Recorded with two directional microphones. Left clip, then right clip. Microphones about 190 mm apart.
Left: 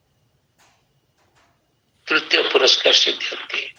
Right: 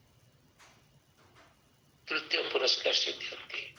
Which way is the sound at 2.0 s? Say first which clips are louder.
Left 14 dB; 50° left (ahead or behind).